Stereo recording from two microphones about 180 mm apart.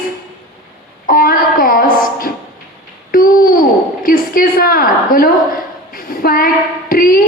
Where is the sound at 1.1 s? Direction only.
55° left (ahead or behind).